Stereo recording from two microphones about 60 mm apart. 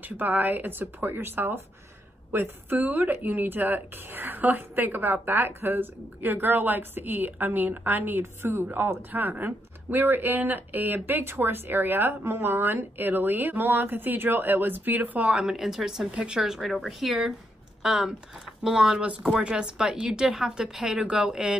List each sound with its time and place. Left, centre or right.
0.0 s speech: right
15.3 s speech: centre
16.1 s speech: centre
16.3 s speech: centre